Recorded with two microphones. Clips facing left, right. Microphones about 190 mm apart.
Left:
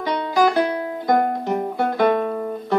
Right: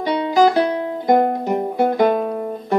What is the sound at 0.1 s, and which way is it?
Music, 15° right (ahead or behind).